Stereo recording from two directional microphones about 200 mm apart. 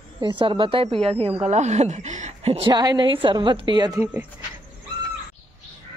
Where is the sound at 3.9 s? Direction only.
10° right (ahead or behind).